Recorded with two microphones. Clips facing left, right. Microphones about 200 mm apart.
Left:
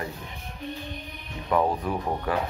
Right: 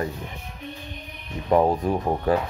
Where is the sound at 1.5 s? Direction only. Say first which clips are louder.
Right 5 dB; 30° right (ahead or behind).